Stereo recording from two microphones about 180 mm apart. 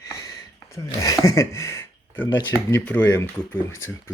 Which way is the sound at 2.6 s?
10° left (ahead or behind).